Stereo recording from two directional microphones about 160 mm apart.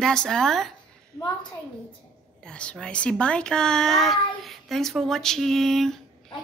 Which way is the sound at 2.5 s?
5° left (ahead or behind).